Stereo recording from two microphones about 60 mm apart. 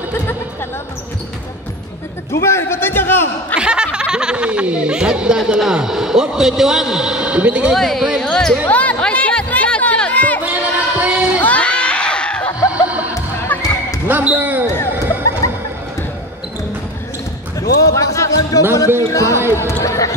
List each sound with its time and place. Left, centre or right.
2.4 s a man's voice: left
3.5 s a man's voice: centre
7.7 s speech: centre
8.6 s chatter: left
10.4 s a sound: right
11.4 s screaming: left
12.8 s music: right
13.6 s basketball bounce: left
14.0 s basketball bounce: right
17.6 s basketball bounce: left
18.9 s speech: left
19.5 s speech: left